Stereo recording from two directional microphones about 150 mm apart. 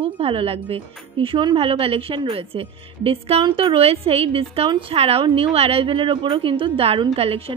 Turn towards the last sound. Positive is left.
turn(degrees=-40)  # may be behind; listen again after turning